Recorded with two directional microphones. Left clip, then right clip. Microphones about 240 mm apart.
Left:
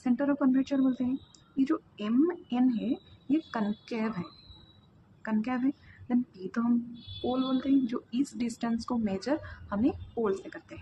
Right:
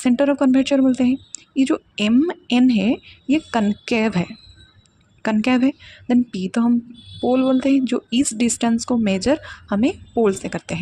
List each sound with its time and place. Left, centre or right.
0.0 s speech: right
5.2 s speech: right